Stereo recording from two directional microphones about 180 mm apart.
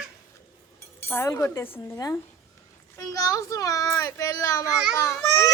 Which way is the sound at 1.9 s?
15° left (ahead or behind).